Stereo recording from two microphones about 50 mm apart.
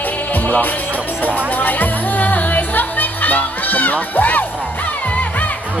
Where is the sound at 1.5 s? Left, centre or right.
Left.